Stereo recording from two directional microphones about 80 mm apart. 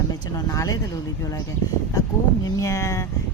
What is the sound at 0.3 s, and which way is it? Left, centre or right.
Speech, left.